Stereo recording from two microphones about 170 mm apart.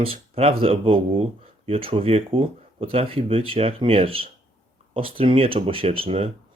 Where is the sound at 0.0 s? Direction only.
35° right (ahead or behind).